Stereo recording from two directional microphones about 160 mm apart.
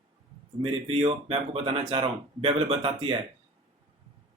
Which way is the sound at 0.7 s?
40° right (ahead or behind).